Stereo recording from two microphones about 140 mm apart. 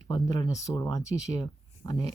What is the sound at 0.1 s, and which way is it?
Speech, 25° left (ahead or behind).